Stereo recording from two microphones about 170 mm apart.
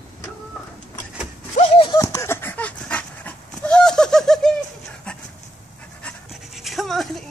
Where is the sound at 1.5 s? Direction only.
35° left (ahead or behind).